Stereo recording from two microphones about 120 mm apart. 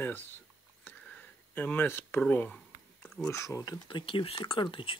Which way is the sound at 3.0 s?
10° left (ahead or behind).